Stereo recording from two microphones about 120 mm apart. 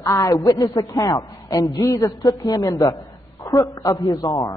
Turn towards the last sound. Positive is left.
turn(degrees=30)  # may be behind; listen again after turning